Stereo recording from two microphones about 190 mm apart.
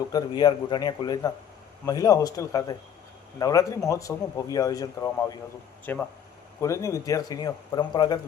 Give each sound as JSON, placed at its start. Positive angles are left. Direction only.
{"t": 0.1, "sound": "speech", "side_deg": 20}